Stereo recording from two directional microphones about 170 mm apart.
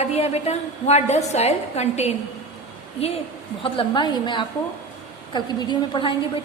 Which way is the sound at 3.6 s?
30° left (ahead or behind).